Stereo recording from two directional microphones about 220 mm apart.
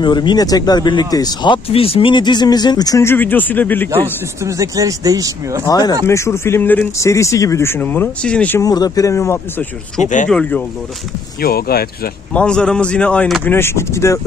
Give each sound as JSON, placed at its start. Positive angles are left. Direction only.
{"t": 0.0, "sound": "speech", "side_deg": 20}
{"t": 4.4, "sound": "speech", "side_deg": -15}
{"t": 5.7, "sound": "speech", "side_deg": 20}
{"t": 11.4, "sound": "speech", "side_deg": 45}
{"t": 12.4, "sound": "speech", "side_deg": 5}